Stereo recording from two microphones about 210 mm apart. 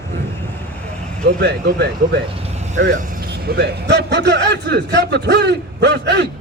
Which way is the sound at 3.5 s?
55° right (ahead or behind).